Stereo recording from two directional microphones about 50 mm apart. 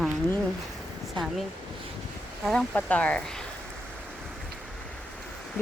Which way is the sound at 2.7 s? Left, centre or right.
Left.